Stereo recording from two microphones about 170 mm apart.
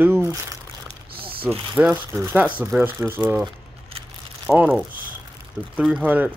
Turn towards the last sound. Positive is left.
turn(degrees=-10)  # may be behind; listen again after turning